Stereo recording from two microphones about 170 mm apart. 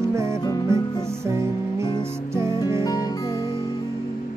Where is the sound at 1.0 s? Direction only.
15° right (ahead or behind).